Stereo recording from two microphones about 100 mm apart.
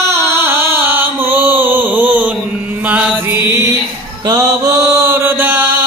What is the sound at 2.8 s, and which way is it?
Music, 15° right (ahead or behind).